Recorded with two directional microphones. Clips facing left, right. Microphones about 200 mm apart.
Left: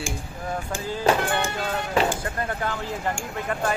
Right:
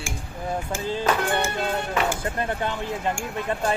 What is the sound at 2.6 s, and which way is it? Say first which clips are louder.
Speech: right 1 dB; 20° right (ahead or behind).